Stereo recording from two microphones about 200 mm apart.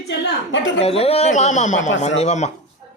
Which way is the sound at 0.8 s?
30° left (ahead or behind).